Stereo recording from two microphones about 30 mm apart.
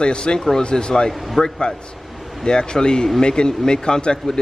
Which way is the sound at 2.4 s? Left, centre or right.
Left.